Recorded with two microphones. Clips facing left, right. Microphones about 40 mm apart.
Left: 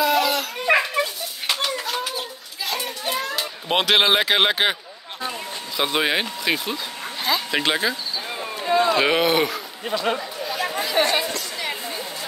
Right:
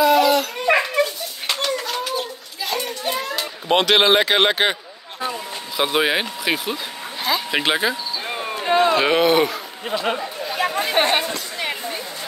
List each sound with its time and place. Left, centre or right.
0.0 s dog: centre
5.8 s speech: centre
8.3 s a sound: right
8.6 s speech: right
8.9 s a man's voice: centre
10.6 s chatter: right
11.0 s speech: right
11.2 s a sound: right